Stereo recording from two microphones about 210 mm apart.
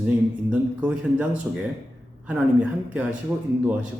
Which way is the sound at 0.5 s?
5° right (ahead or behind).